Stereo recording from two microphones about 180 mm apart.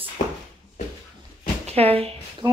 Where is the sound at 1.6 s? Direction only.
35° right (ahead or behind).